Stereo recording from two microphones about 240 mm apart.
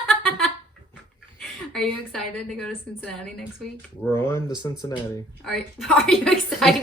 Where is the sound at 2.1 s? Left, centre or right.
Centre.